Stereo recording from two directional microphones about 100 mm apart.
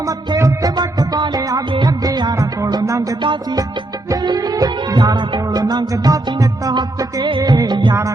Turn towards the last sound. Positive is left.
turn(degrees=-50)  # may be behind; listen again after turning